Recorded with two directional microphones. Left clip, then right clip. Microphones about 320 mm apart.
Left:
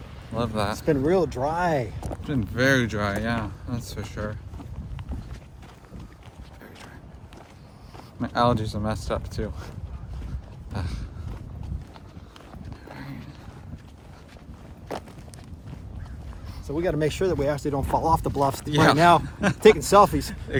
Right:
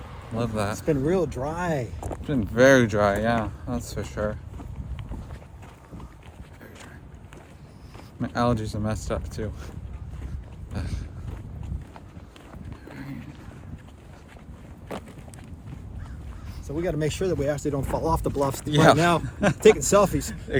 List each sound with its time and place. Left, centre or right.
0.3 s speech: centre
0.8 s speech: left
2.0 s speech: centre
2.6 s speech: centre
8.2 s speech: centre
10.7 s a sound: centre
14.9 s a sound: centre
16.6 s speech: left
18.6 s speech: centre
18.9 s speech: centre
19.2 s speech: centre
19.8 s speech: centre
20.5 s speech: centre